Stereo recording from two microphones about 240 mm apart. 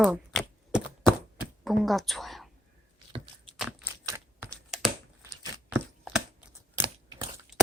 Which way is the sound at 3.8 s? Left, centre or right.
Centre.